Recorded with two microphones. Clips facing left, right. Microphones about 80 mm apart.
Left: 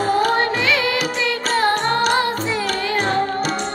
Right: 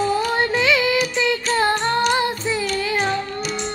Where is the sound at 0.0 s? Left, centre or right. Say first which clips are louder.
Left 2 dB; left.